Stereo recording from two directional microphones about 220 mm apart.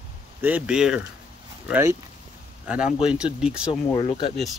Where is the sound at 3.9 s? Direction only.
25° left (ahead or behind).